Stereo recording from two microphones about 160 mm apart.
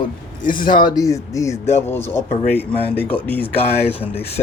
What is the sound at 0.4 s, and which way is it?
Speech, 60° left (ahead or behind).